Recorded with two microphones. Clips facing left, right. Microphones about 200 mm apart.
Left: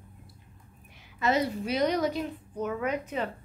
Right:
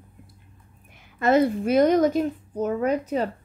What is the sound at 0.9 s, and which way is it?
A woman's voice, 50° right (ahead or behind).